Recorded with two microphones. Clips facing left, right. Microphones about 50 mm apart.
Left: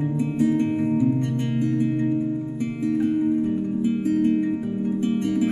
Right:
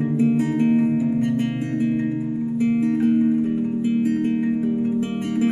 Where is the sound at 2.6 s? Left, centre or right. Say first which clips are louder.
Right 4 dB; right.